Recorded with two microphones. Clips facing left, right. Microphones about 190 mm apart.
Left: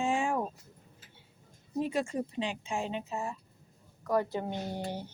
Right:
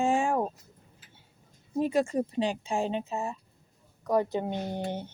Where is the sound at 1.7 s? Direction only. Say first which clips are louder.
Right 5 dB; 45° right (ahead or behind); by 5.1 s 20° right (ahead or behind).